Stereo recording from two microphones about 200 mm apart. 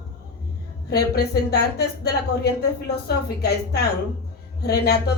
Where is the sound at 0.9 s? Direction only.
55° left (ahead or behind).